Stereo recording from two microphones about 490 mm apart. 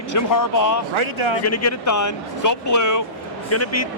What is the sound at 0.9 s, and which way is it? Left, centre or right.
Speech, right.